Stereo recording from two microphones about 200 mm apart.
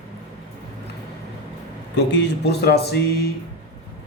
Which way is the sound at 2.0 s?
60° left (ahead or behind).